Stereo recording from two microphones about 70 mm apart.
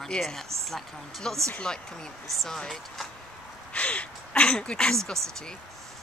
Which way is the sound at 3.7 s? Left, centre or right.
Centre.